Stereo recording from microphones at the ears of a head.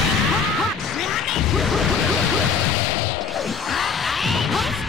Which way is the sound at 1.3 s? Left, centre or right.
Left.